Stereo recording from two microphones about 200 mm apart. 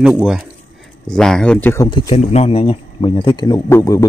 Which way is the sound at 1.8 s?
20° left (ahead or behind).